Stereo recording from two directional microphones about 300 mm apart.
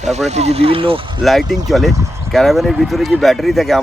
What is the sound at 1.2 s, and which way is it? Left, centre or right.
Speech, centre.